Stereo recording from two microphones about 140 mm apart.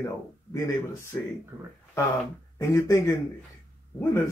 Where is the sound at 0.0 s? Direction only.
20° left (ahead or behind).